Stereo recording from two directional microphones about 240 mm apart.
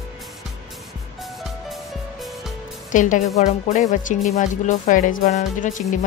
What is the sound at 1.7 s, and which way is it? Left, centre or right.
Music, centre.